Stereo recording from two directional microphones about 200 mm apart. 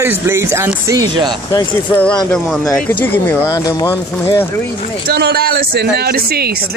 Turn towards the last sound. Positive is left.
turn(degrees=-50)  # may be behind; listen again after turning